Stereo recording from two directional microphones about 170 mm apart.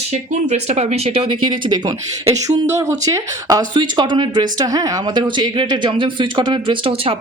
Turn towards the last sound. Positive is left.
turn(degrees=-35)  # may be behind; listen again after turning